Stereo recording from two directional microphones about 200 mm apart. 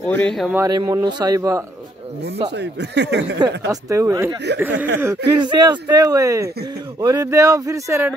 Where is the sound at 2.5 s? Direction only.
60° right (ahead or behind).